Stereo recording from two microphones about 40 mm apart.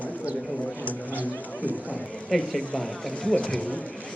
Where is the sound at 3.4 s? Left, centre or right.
Left.